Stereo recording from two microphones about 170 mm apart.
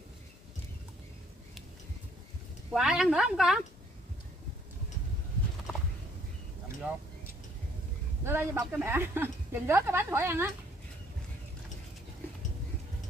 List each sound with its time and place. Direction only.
2.7 s a woman's voice: 5° right (ahead or behind)
8.2 s a woman's voice: 15° right (ahead or behind)